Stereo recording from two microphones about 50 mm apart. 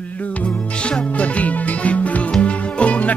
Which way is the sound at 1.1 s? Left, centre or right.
Left.